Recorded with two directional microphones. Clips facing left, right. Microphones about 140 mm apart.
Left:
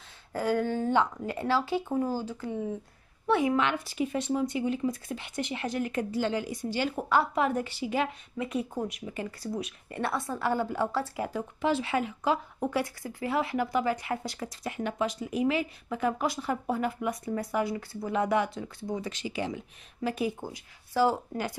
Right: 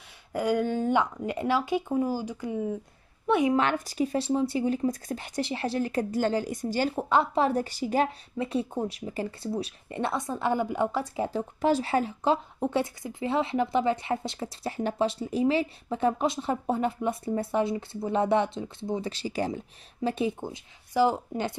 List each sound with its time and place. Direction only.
0.3 s a woman's voice: 15° right (ahead or behind)
3.5 s speech: 40° right (ahead or behind)
7.0 s speech: 25° right (ahead or behind)
9.9 s speech: 20° right (ahead or behind)
11.6 s speech: 40° right (ahead or behind)
20.0 s speech: 25° right (ahead or behind)